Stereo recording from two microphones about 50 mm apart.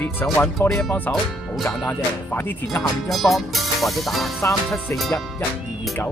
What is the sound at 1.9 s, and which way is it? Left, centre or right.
Speech, left.